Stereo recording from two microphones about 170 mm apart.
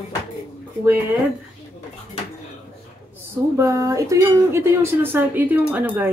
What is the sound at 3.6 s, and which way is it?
Speech, 20° right (ahead or behind).